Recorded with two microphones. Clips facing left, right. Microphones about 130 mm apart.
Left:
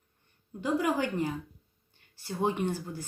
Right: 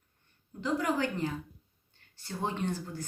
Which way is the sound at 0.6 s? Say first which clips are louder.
Left 2 dB; 15° left (ahead or behind).